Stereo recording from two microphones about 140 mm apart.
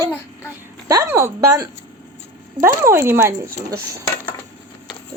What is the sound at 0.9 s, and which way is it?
Speech, 20° right (ahead or behind).